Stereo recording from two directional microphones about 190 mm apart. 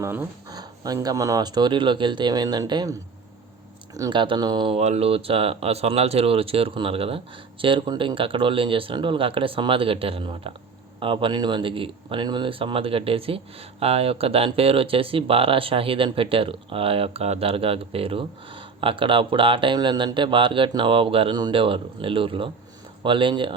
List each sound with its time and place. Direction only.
0.0 s speech: 15° right (ahead or behind)
3.9 s speech: 20° right (ahead or behind)